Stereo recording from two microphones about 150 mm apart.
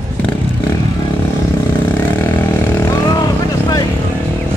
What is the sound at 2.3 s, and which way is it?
Vehicle, 15° left (ahead or behind).